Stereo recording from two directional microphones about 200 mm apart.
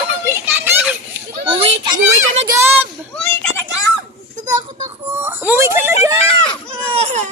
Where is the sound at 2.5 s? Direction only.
10° right (ahead or behind).